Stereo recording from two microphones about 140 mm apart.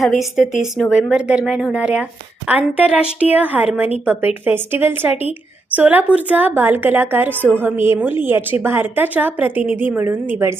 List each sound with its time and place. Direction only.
0.0 s a woman's voice: centre (ahead or behind)